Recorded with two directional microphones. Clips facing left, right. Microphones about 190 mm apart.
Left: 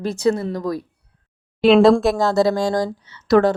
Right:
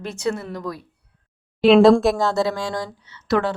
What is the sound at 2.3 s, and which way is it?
A woman's voice, 40° left (ahead or behind).